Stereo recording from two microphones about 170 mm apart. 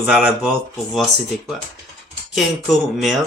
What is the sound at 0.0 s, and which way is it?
Speech, 10° right (ahead or behind).